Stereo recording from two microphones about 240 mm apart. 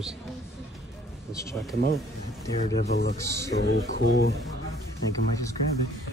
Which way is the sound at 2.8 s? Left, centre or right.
Left.